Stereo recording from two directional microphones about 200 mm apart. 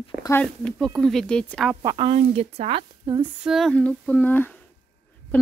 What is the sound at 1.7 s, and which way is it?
Speech, 15° right (ahead or behind).